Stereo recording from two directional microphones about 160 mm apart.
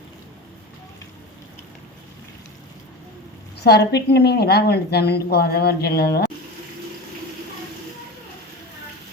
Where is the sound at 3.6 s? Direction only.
90° left.